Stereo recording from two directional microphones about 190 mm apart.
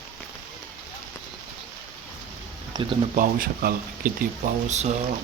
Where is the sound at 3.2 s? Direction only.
50° right (ahead or behind).